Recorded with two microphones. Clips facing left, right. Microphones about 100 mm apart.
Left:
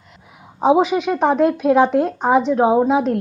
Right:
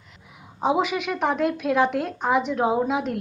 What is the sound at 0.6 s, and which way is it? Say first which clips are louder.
A woman's voice: left 8 dB; 25° left (ahead or behind).